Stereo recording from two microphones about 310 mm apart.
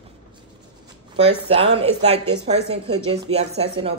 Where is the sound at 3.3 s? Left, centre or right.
Centre.